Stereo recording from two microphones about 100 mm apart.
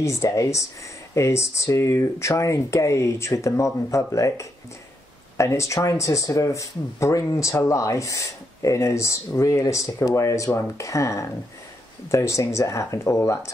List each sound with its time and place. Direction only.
0.0 s speech: 30° left (ahead or behind)